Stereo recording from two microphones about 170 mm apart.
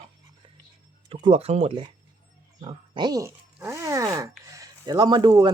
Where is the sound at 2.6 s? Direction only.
25° right (ahead or behind).